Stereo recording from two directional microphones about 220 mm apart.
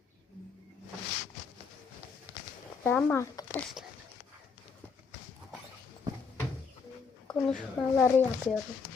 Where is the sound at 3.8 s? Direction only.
5° right (ahead or behind).